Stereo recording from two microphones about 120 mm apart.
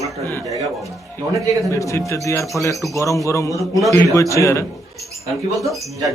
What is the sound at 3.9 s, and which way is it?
Speech, 25° left (ahead or behind).